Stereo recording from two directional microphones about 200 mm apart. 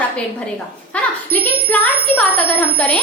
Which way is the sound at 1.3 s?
10° left (ahead or behind).